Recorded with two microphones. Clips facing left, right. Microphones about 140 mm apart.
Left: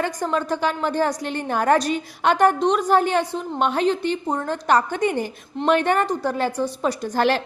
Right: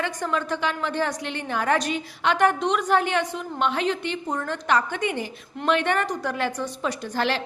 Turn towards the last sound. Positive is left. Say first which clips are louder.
# left 5 dB
turn(degrees=45)  # may be behind; listen again after turning